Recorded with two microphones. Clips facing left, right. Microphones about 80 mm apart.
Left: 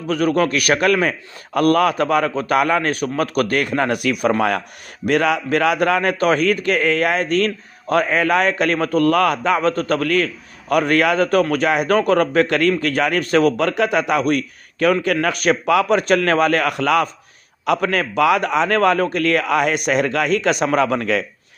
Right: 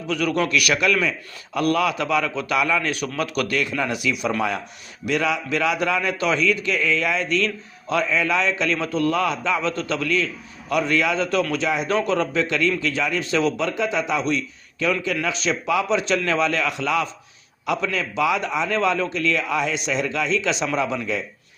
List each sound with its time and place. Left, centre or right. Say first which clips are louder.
0.1 s a man's voice: left 4 dB; left